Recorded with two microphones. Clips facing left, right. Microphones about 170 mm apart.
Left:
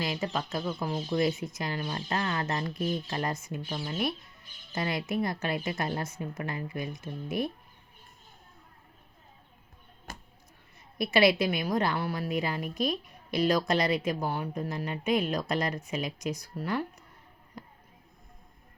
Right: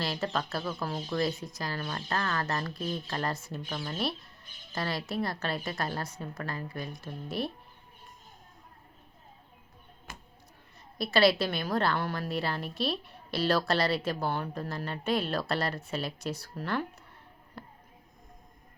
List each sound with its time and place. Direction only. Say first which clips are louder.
0.0 s a woman's voice: even; 15° left (ahead or behind)
10.1 s a sound: left 3 dB; 40° left (ahead or behind)
10.9 s speech: left 1 dB; 20° left (ahead or behind)